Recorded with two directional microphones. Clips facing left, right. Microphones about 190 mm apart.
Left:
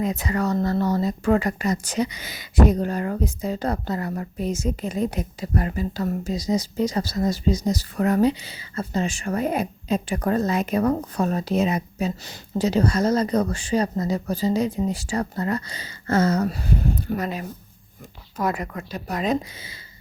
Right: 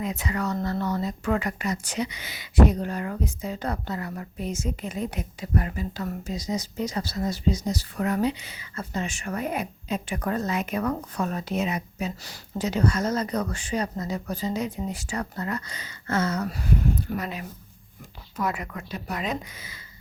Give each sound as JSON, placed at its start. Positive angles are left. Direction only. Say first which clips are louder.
{"t": 0.0, "sound": "speech", "louder": "left 5 dB", "side_deg": 40}
{"t": 12.2, "sound": "speech", "louder": "left 6 dB", "side_deg": 25}
{"t": 17.2, "sound": "speech", "louder": "left 4 dB", "side_deg": 40}